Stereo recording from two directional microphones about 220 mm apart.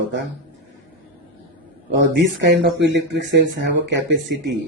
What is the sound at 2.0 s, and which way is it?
Speech, 50° right (ahead or behind).